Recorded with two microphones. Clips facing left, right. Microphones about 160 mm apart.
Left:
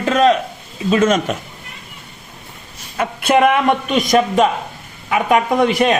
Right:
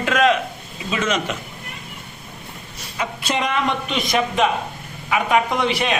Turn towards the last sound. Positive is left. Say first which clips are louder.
# left 7 dB
turn(degrees=45)  # may be behind; listen again after turning